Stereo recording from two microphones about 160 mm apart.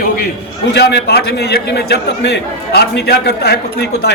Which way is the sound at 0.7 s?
90° left.